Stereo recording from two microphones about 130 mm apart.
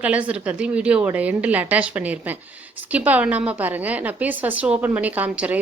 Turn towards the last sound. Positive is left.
turn(degrees=-10)  # may be behind; listen again after turning